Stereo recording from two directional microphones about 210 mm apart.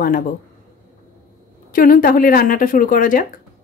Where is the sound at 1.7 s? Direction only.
40° left (ahead or behind).